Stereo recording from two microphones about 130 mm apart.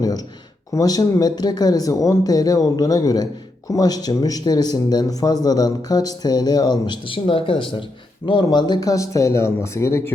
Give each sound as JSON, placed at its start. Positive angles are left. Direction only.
{"t": 0.7, "sound": "speech", "side_deg": 30}